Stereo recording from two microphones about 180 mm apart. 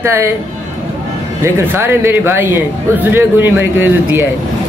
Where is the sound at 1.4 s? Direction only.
10° right (ahead or behind).